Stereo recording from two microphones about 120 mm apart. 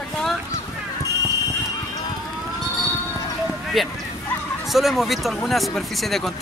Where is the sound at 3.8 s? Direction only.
Centre (ahead or behind).